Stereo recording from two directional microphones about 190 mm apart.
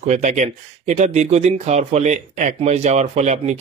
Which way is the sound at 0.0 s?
40° right (ahead or behind).